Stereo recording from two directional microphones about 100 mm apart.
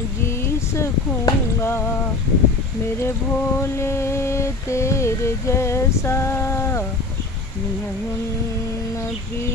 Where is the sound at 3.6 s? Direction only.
25° left (ahead or behind).